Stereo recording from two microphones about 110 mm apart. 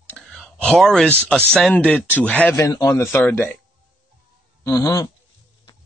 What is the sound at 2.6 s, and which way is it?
Speech, 35° left (ahead or behind).